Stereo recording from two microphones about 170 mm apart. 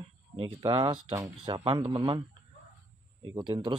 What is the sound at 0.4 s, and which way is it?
A man's voice, 30° right (ahead or behind).